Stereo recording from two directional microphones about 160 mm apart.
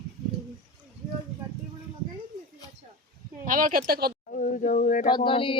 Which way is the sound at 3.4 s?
55° right (ahead or behind).